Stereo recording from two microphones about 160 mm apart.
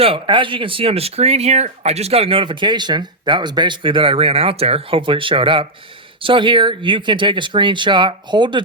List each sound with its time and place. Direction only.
0.0 s speech: 30° right (ahead or behind)